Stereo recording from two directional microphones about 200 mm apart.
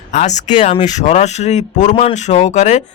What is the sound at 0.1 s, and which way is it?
Speech, 35° left (ahead or behind).